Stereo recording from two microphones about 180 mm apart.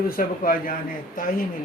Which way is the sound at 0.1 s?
50° left (ahead or behind).